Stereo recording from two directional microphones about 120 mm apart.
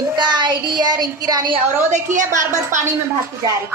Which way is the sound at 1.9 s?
90° right.